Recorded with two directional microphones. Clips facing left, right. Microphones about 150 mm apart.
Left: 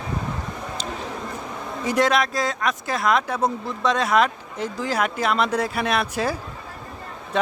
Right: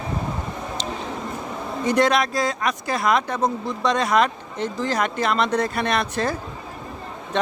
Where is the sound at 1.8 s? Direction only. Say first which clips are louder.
Right 1 dB; centre (ahead or behind).